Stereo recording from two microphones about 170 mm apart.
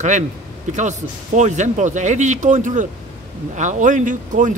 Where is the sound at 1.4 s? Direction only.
45° right (ahead or behind).